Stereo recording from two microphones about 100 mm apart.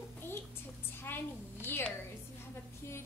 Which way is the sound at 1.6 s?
20° left (ahead or behind).